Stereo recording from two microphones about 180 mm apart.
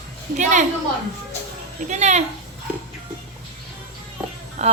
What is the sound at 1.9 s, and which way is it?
Speech, 40° right (ahead or behind).